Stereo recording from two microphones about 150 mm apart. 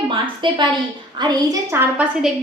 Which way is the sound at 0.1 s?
35° right (ahead or behind).